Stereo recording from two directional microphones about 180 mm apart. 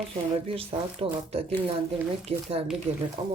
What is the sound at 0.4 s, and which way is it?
Speech, 30° right (ahead or behind).